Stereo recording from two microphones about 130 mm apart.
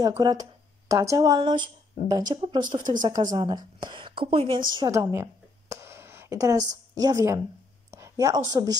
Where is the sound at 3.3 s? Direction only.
30° right (ahead or behind).